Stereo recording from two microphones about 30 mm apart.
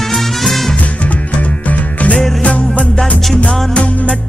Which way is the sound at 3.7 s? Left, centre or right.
Left.